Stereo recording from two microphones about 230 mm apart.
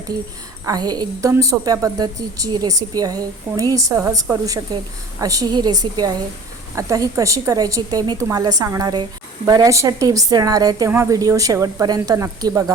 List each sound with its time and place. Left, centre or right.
0.6 s a woman's voice: centre